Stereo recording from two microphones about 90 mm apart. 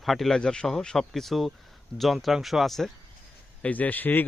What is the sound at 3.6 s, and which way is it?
Speech, 15° left (ahead or behind).